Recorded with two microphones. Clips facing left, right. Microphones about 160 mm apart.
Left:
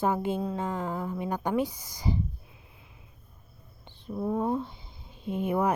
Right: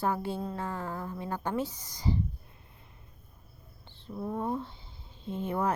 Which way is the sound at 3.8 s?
15° left (ahead or behind).